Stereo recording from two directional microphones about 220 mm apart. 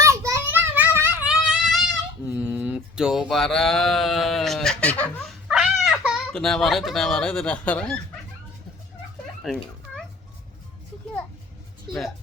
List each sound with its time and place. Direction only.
0.0 s child singing: 15° right (ahead or behind)
2.3 s a sound: 5° right (ahead or behind)
5.5 s speech: centre (ahead or behind)
9.4 s children playing: centre (ahead or behind)
11.9 s speech: centre (ahead or behind)